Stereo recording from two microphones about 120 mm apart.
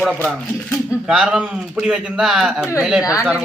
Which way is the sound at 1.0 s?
5° right (ahead or behind).